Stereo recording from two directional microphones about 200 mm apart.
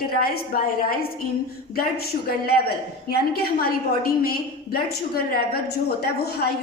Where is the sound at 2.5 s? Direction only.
50° left (ahead or behind).